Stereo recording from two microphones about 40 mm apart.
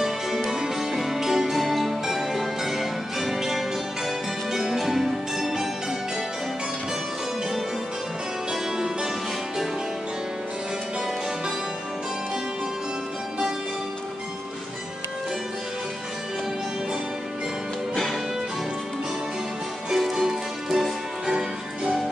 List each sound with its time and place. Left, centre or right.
0.0 s music: centre
8.7 s music: centre
19.9 s music: centre